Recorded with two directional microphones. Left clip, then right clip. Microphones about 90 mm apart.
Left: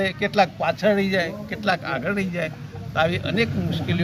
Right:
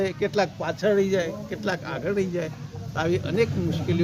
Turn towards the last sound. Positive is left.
turn(degrees=-50)  # may be behind; listen again after turning